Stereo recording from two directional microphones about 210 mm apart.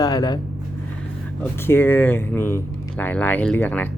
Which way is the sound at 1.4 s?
10° left (ahead or behind).